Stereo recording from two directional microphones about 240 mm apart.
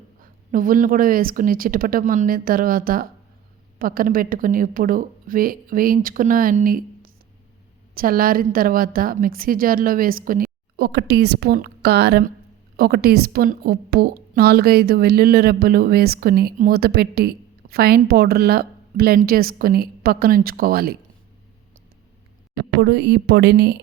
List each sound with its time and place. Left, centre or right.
0.2 s a woman's voice: right
22.8 s speech: right